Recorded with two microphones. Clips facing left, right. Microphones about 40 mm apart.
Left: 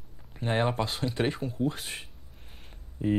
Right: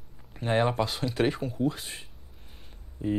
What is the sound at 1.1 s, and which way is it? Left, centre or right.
Speech, centre.